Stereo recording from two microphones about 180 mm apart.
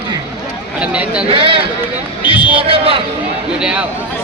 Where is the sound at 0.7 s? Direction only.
5° right (ahead or behind).